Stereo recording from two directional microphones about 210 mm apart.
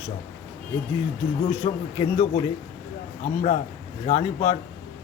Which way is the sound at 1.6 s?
25° left (ahead or behind).